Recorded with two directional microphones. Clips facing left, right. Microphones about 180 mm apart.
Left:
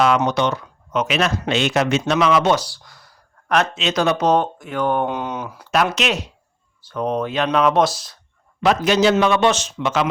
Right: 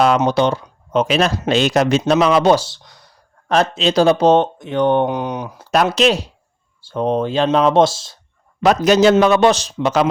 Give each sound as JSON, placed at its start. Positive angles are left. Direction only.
{"t": 0.3, "sound": "speech", "side_deg": -30}
{"t": 3.5, "sound": "speech", "side_deg": -35}
{"t": 5.6, "sound": "speech", "side_deg": -35}
{"t": 8.6, "sound": "speech", "side_deg": -40}